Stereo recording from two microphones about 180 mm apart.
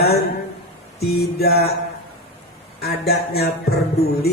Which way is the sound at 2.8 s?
60° left (ahead or behind).